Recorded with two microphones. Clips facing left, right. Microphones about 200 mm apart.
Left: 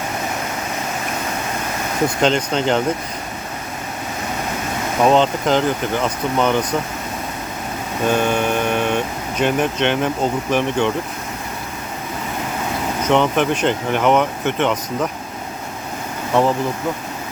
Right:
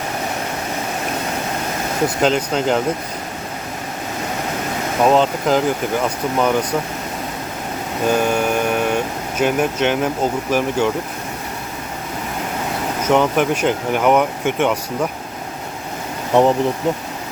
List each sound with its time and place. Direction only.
2.2 s speech: 5° right (ahead or behind)
5.0 s speech: 5° right (ahead or behind)
8.0 s vehicle: 5° right (ahead or behind)
9.4 s speech: 5° right (ahead or behind)
13.1 s speech: 5° right (ahead or behind)
16.3 s speech: 20° right (ahead or behind)